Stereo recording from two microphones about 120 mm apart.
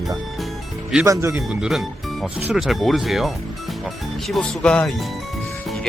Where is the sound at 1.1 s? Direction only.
25° right (ahead or behind).